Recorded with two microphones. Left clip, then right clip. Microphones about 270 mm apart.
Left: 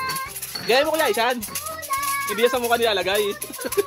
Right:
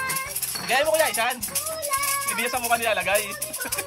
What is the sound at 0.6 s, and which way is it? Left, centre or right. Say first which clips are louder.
Speech: left 2 dB; centre.